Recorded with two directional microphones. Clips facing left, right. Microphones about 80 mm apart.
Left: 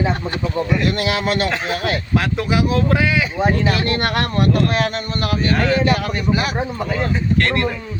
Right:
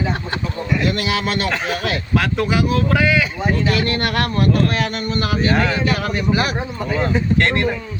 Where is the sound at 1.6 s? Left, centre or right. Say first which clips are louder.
Left 1 dB; left.